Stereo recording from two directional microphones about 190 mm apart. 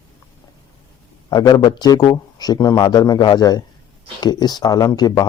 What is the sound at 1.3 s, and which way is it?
Speech, 20° left (ahead or behind).